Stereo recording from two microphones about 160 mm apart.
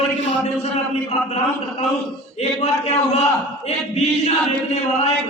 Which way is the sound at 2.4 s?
45° left (ahead or behind).